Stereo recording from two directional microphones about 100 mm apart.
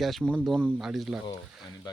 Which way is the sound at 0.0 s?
Centre (ahead or behind).